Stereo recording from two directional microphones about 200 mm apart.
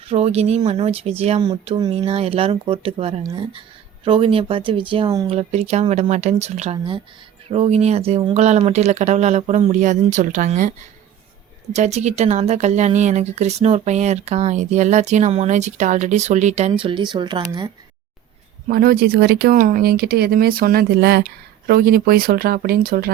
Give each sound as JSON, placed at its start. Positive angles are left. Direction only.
{"t": 0.1, "sound": "speech", "side_deg": -30}
{"t": 11.7, "sound": "speech", "side_deg": -35}
{"t": 18.7, "sound": "speech", "side_deg": -50}